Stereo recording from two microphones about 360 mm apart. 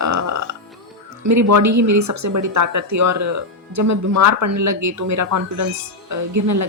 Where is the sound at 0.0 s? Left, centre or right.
Right.